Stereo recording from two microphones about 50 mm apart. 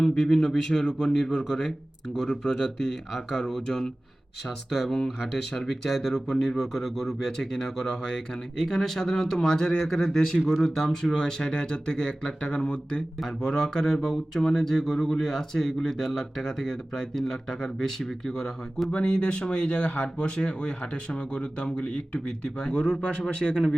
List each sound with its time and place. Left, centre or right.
0.0 s speech: centre
4.4 s speech: centre
4.9 s speech: centre
18.9 s speech: left